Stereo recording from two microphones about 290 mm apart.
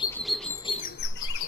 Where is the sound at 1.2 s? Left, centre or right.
Left.